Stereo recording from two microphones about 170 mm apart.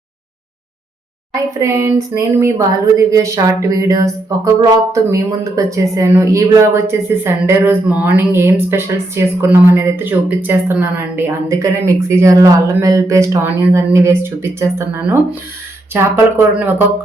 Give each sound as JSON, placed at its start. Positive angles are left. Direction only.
{"t": 1.3, "sound": "speech", "side_deg": -20}